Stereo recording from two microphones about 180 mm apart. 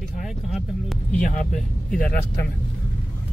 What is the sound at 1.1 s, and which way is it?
Speech, 45° left (ahead or behind).